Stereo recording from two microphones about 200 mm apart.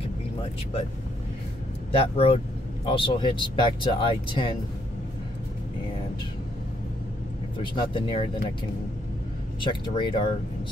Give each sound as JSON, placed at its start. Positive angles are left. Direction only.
{"t": 1.9, "sound": "speech", "side_deg": 30}
{"t": 7.5, "sound": "speech", "side_deg": 25}
{"t": 9.6, "sound": "speech", "side_deg": 25}